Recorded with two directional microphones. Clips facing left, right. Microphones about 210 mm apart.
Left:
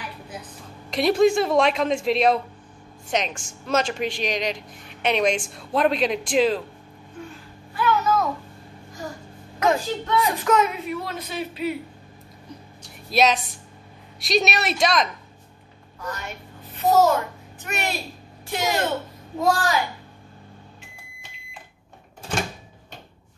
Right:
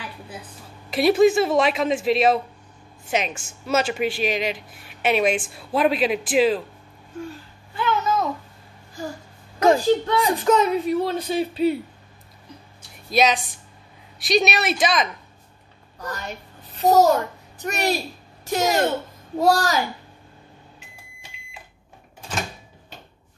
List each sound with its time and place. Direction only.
0.8 s speech: 5° right (ahead or behind)
7.7 s babbling: 25° right (ahead or behind)
9.6 s a woman's voice: 35° right (ahead or behind)
13.1 s speech: centre (ahead or behind)
16.2 s a child's voice: 35° right (ahead or behind)